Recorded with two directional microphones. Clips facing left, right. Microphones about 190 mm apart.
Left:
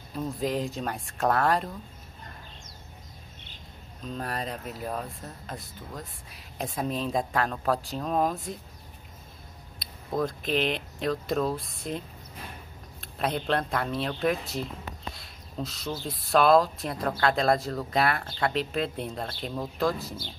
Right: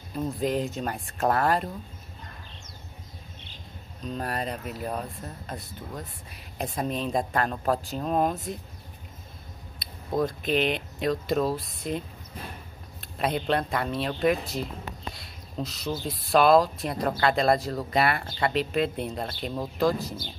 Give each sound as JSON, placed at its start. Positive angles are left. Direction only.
{"t": 0.1, "sound": "speech", "side_deg": 0}
{"t": 4.0, "sound": "speech", "side_deg": 0}
{"t": 9.8, "sound": "speech", "side_deg": 0}
{"t": 13.0, "sound": "speech", "side_deg": 0}